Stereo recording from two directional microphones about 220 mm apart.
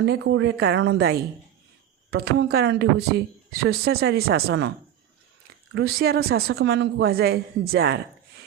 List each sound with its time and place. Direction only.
0.0 s speech: 55° right (ahead or behind)
5.7 s speech: 45° right (ahead or behind)